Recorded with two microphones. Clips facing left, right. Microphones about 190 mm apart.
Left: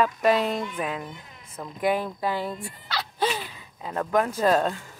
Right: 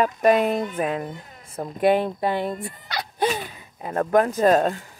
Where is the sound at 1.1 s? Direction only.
40° right (ahead or behind).